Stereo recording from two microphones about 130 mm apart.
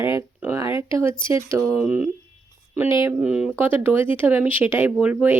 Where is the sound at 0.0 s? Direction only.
20° right (ahead or behind).